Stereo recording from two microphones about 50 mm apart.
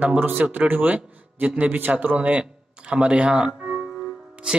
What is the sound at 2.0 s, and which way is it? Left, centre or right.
Music, right.